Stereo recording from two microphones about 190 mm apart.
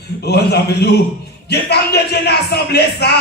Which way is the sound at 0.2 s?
60° left (ahead or behind).